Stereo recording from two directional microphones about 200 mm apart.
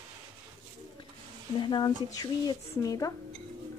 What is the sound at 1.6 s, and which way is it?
Speech, 20° left (ahead or behind).